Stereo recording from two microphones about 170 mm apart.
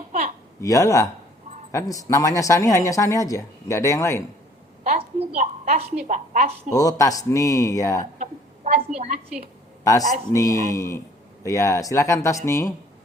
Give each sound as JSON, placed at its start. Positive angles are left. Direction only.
{"t": 0.1, "sound": "a sound", "side_deg": -45}
{"t": 0.6, "sound": "speech", "side_deg": 20}
{"t": 4.8, "sound": "a woman's voice", "side_deg": -40}
{"t": 6.7, "sound": "speech", "side_deg": 20}
{"t": 8.2, "sound": "a sound", "side_deg": -45}
{"t": 9.0, "sound": "a woman's voice", "side_deg": -45}
{"t": 9.8, "sound": "speech", "side_deg": 20}